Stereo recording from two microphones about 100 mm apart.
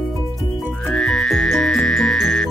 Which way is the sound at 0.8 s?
5° left (ahead or behind).